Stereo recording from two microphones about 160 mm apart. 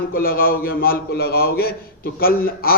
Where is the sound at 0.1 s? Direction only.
65° left (ahead or behind).